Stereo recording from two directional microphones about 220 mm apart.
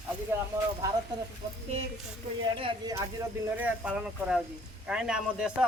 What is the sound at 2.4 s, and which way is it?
Speech, 20° right (ahead or behind).